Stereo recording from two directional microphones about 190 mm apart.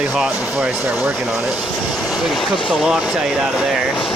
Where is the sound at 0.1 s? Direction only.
5° right (ahead or behind).